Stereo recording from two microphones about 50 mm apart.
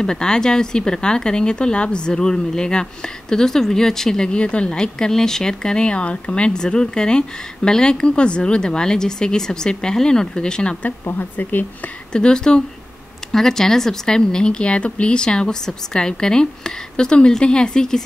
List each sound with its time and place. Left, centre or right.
0.0 s speech: centre
4.3 s speech: left
10.8 s speech: left
12.1 s speech: centre